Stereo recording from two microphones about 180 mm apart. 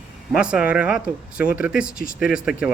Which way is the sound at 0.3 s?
5° right (ahead or behind).